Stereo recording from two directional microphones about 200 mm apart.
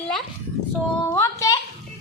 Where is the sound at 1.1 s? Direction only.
15° left (ahead or behind).